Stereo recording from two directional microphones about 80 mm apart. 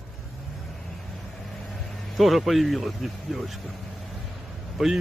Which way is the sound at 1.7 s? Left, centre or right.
Centre.